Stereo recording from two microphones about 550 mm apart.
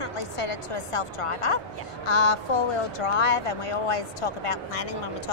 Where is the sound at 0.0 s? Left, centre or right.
Left.